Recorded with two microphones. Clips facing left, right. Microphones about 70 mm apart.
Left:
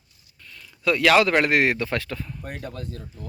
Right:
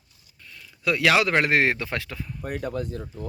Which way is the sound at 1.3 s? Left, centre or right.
Right.